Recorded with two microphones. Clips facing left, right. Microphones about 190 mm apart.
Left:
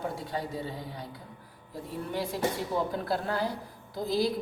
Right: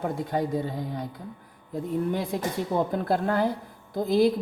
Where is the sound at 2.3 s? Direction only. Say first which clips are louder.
Right 3 dB; 50° right (ahead or behind).